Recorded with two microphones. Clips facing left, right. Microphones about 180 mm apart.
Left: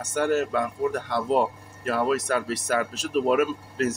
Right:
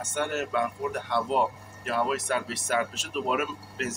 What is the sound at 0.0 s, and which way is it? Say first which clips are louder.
Speech: left 6 dB; 35° left (ahead or behind).